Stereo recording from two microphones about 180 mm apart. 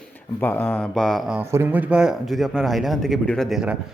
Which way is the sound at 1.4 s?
15° right (ahead or behind).